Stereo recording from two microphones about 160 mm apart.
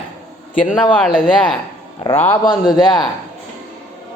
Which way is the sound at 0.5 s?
55° left (ahead or behind).